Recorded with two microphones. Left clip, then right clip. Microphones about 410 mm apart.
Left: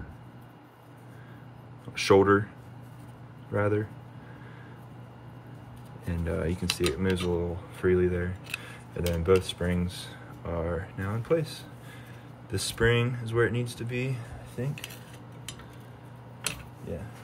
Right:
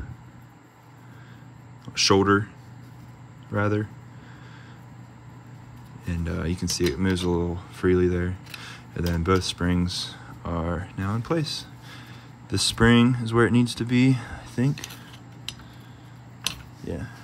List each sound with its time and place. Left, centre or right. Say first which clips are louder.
2.0 s speech: right 1 dB; centre
3.5 s speech: right 2 dB; centre
6.0 s speech: even; centre